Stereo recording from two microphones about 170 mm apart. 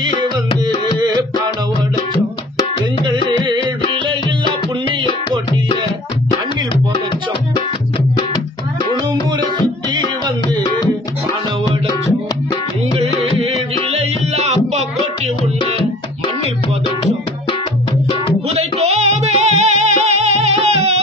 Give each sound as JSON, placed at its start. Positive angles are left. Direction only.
{"t": 0.9, "sound": "music", "side_deg": -25}
{"t": 3.4, "sound": "music", "side_deg": -30}
{"t": 13.9, "sound": "music", "side_deg": -40}
{"t": 18.5, "sound": "music", "side_deg": -40}